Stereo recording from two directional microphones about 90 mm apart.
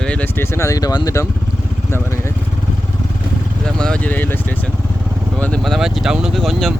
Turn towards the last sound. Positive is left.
turn(degrees=5)  # may be behind; listen again after turning